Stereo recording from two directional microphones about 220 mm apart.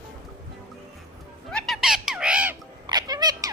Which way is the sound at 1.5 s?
Centre (ahead or behind).